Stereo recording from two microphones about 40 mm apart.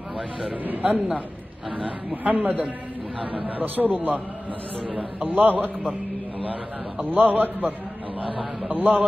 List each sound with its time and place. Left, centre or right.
0.7 s a man's voice: right
4.8 s a man's voice: right
7.0 s a man's voice: right